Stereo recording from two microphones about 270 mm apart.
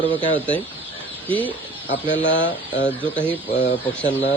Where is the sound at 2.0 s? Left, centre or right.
Left.